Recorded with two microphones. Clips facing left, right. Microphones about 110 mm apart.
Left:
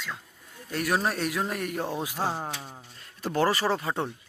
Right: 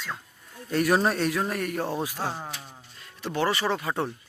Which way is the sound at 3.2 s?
40° left (ahead or behind).